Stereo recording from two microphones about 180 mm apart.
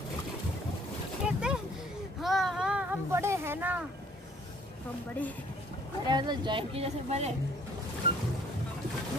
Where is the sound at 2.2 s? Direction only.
Centre (ahead or behind).